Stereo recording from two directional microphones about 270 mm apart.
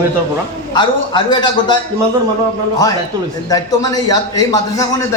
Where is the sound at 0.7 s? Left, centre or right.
Centre.